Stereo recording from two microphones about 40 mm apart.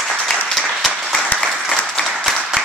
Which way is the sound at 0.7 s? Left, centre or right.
Centre.